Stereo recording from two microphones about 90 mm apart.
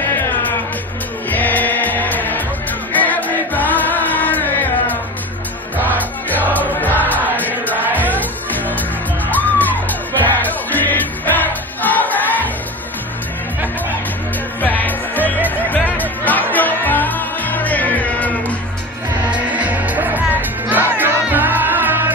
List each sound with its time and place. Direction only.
1.3 s music: 20° left (ahead or behind)
2.9 s choir: 20° left (ahead or behind)
6.5 s music: 20° left (ahead or behind)
14.6 s music: 20° left (ahead or behind)
19.5 s music: 15° right (ahead or behind)